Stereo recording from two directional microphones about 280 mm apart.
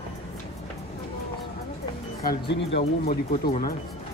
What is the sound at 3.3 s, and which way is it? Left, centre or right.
Speech, left.